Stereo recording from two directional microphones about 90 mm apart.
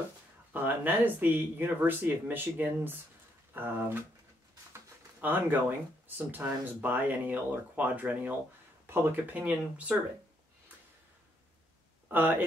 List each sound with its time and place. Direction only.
0.5 s speech: 20° right (ahead or behind)
5.2 s speech: 20° right (ahead or behind)
12.1 s speech: 20° right (ahead or behind)